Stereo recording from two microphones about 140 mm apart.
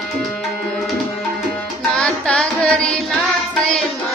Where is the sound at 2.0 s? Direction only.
5° left (ahead or behind).